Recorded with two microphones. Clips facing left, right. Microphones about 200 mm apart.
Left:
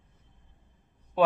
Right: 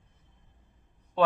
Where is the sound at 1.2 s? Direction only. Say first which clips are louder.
Left 1 dB; 10° left (ahead or behind).